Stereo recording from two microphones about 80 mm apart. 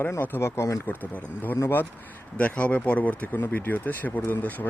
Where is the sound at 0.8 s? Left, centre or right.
Left.